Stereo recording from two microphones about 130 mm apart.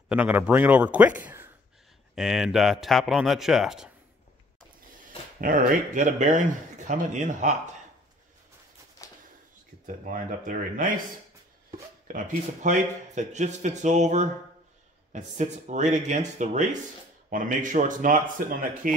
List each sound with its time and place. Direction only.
0.1 s a man's voice: 10° right (ahead or behind)
2.1 s a man's voice: centre (ahead or behind)
5.4 s speech: 90° right; by 7.7 s 70° right (ahead or behind)
9.0 s a sound: 25° left (ahead or behind)
9.8 s speech: 90° right
12.1 s speech: 85° right; by 16.6 s 65° right (ahead or behind)
17.3 s speech: 90° right